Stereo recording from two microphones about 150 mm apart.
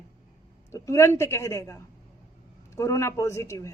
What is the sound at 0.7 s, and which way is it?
Speech, 20° left (ahead or behind).